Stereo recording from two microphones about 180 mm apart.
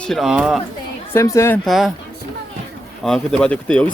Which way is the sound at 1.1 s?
15° left (ahead or behind).